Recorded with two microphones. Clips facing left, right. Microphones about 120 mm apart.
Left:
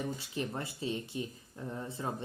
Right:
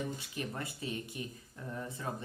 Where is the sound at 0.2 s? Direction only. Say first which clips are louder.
Left 3 dB; 30° left (ahead or behind).